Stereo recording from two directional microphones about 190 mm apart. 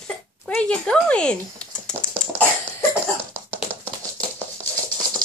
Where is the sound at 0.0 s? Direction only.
5° left (ahead or behind).